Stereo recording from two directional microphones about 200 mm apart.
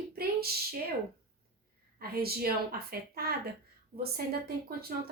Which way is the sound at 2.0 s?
50° right (ahead or behind).